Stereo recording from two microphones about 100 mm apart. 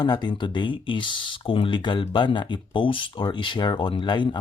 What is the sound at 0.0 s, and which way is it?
Speech, 45° left (ahead or behind).